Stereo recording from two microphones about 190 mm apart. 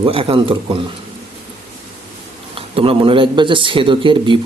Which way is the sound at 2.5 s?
30° right (ahead or behind).